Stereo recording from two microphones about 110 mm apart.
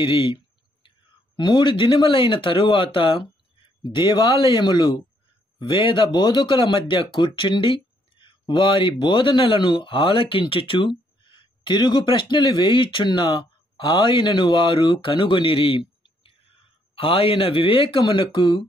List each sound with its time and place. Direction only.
0.0 s speech: 55° left (ahead or behind)
3.8 s speech: 35° left (ahead or behind)
5.6 s speech: 50° left (ahead or behind)